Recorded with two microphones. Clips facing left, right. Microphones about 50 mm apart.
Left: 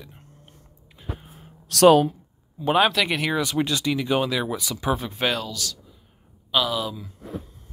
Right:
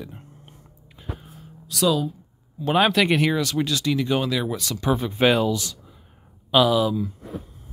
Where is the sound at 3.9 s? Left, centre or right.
Centre.